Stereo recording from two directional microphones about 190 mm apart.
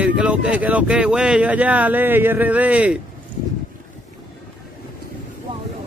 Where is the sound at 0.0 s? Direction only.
5° right (ahead or behind).